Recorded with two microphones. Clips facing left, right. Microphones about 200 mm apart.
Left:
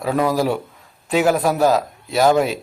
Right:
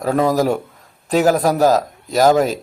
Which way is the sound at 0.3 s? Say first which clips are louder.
Right 3 dB; 45° right (ahead or behind).